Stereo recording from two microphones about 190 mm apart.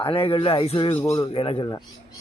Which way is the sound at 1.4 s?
30° left (ahead or behind).